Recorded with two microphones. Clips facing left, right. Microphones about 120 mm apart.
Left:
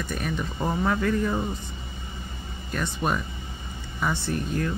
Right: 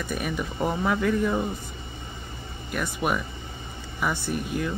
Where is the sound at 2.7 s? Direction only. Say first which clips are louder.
Even; 10° right (ahead or behind).